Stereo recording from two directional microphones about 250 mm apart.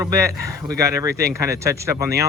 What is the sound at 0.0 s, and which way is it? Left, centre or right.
Speech, centre.